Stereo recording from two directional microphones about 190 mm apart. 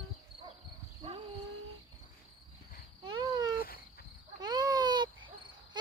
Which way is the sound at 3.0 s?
25° right (ahead or behind).